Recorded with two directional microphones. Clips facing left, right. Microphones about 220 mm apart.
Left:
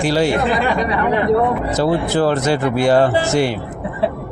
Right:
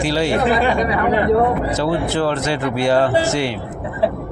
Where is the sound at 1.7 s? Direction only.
40° left (ahead or behind).